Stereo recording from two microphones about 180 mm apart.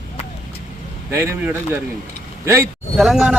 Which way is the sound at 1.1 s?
15° right (ahead or behind).